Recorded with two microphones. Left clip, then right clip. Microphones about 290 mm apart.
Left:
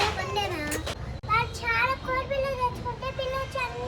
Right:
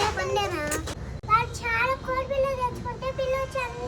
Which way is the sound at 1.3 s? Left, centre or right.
Right.